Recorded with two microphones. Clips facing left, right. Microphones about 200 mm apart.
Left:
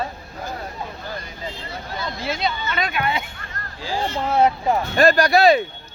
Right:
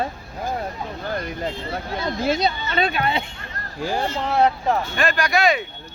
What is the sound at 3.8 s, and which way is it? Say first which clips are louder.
Speech: right 3 dB; 60° right (ahead or behind).